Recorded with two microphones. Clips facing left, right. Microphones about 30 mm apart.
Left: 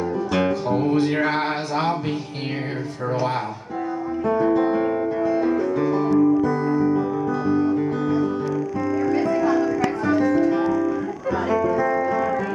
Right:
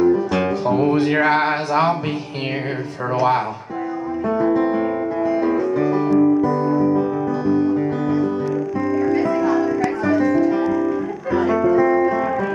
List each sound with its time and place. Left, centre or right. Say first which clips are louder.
0.0 s music: right 5 dB; centre
4.3 s music: right 1 dB; centre
8.8 s music: right 3 dB; centre
10.7 s music: right 2 dB; centre